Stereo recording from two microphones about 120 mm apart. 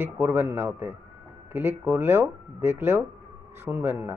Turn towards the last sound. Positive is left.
turn(degrees=-20)  # may be behind; listen again after turning